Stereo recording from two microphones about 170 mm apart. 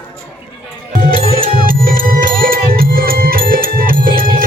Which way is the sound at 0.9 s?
55° right (ahead or behind).